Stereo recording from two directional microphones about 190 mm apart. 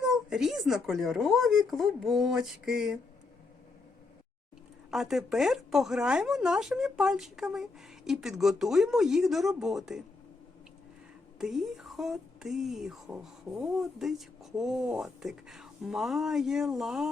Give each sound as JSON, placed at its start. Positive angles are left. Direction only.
{"t": 0.0, "sound": "speech", "side_deg": -5}
{"t": 4.9, "sound": "speech", "side_deg": 0}
{"t": 11.3, "sound": "speech", "side_deg": 0}